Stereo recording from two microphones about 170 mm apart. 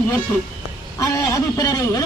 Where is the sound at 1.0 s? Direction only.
20° left (ahead or behind).